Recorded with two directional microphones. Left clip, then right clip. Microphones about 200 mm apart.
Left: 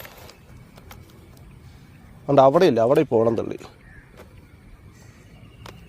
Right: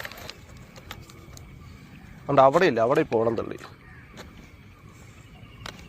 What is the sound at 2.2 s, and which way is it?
Speech, 60° left (ahead or behind).